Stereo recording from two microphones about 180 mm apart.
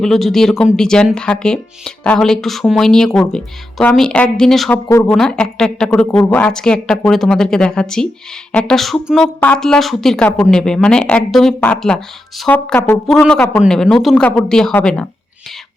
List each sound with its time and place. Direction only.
0.0 s speech: centre (ahead or behind)